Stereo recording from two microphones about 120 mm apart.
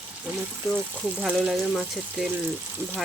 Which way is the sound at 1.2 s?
Centre (ahead or behind).